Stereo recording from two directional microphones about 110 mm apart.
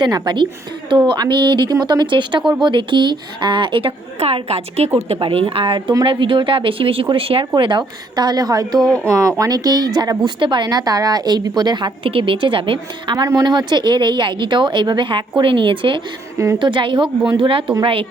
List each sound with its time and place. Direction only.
0.0 s a woman's voice: 45° right (ahead or behind)
7.5 s a woman's voice: 45° right (ahead or behind)
13.2 s speech: 35° right (ahead or behind); by 17.7 s 55° right (ahead or behind)